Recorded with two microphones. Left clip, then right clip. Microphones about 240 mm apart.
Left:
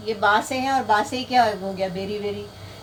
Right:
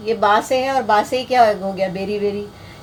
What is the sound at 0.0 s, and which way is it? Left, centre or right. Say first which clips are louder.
Speech: right 4 dB; right.